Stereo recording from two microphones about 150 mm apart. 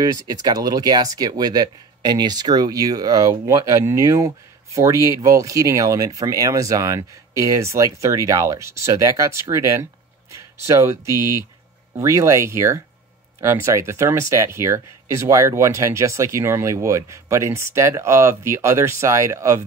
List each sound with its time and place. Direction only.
0.0 s speech: 25° right (ahead or behind)